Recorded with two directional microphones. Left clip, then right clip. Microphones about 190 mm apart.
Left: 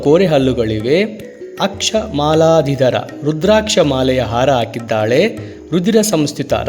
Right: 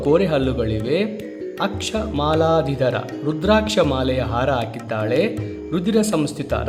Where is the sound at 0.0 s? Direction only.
30° left (ahead or behind).